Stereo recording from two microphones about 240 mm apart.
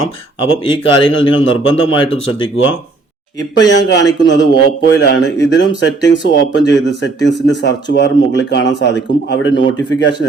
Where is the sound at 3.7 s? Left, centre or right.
Left.